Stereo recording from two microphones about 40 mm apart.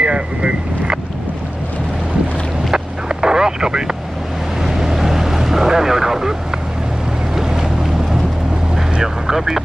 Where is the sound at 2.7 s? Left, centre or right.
Centre.